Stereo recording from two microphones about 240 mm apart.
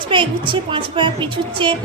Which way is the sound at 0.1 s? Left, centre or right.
Right.